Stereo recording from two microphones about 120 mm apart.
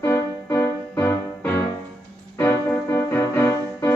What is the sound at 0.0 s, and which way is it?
Music, 25° left (ahead or behind).